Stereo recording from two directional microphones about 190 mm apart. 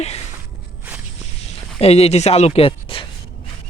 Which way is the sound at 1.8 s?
35° left (ahead or behind).